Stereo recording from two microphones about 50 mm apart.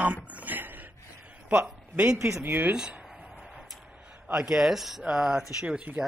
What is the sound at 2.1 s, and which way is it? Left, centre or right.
Speech, right.